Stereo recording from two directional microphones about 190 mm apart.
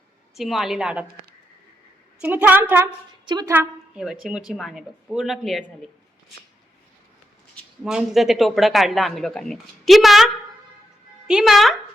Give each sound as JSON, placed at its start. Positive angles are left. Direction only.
{"t": 0.3, "sound": "speech", "side_deg": 0}
{"t": 2.2, "sound": "a woman's voice", "side_deg": -10}
{"t": 3.2, "sound": "a woman's voice", "side_deg": -20}
{"t": 3.5, "sound": "a woman's voice", "side_deg": -5}
{"t": 7.9, "sound": "speech", "side_deg": 0}